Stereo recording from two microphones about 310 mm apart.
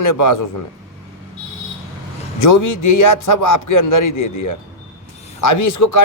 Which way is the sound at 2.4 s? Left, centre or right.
Left.